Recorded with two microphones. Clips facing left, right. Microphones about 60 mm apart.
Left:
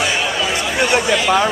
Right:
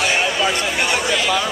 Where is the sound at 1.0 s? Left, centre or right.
Centre.